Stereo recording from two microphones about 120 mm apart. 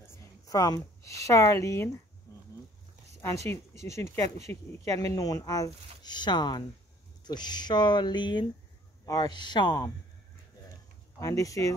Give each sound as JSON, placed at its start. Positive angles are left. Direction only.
{"t": 0.1, "sound": "speech", "side_deg": 30}
{"t": 3.4, "sound": "speech", "side_deg": 25}
{"t": 11.1, "sound": "speech", "side_deg": 30}